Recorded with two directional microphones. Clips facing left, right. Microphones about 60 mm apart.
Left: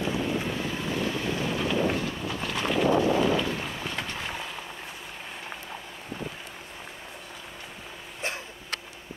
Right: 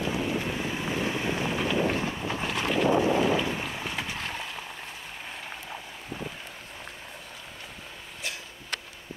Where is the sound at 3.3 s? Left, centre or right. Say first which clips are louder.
Even; centre.